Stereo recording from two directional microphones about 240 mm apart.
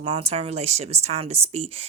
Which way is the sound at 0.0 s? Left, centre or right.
Right.